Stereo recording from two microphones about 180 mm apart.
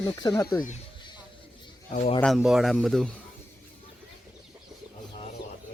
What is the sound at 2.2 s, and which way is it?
Speech, centre (ahead or behind).